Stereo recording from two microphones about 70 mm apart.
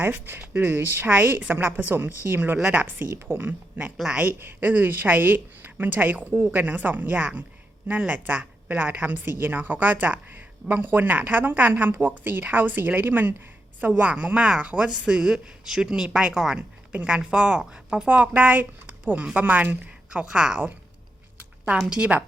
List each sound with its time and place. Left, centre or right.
0.0 s speech: right